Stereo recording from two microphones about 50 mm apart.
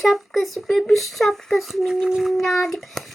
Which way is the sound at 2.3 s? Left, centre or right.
Centre.